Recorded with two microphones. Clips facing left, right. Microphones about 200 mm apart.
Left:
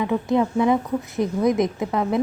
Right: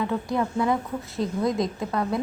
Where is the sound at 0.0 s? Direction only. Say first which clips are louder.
Left 5 dB; 20° left (ahead or behind).